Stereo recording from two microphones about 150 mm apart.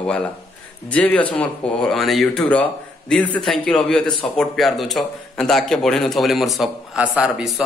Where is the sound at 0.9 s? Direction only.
10° left (ahead or behind).